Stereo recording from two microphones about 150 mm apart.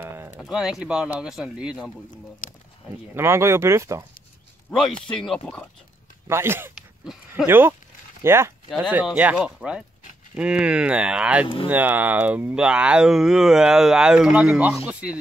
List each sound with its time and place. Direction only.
0.0 s a sound: 15° right (ahead or behind)
0.4 s speech: 5° right (ahead or behind)
2.4 s a sound: 60° left (ahead or behind)
3.2 s speech: 15° right (ahead or behind)
4.6 s speech: 5° left (ahead or behind)
6.2 s speech: 15° right (ahead or behind)
8.6 s speech: centre (ahead or behind)
11.4 s speech: 35° left (ahead or behind)
11.7 s speech: 10° right (ahead or behind)